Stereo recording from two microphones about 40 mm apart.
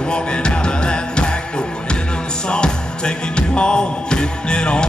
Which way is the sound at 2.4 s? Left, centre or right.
Left.